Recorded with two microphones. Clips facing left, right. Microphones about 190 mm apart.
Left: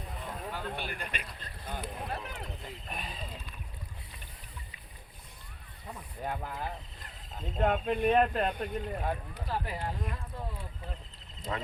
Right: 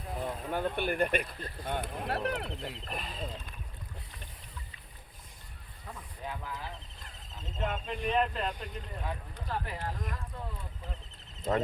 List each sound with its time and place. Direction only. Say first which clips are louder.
0.2 s speech: right 7 dB; 55° right (ahead or behind); by 2.7 s 70° right (ahead or behind)
2.9 s speech: left 2 dB; centre (ahead or behind)
6.2 s speech: left 4 dB; 55° left (ahead or behind)
9.3 s speech: left 1 dB; 10° left (ahead or behind)
11.5 s speech: right 7 dB; 40° right (ahead or behind)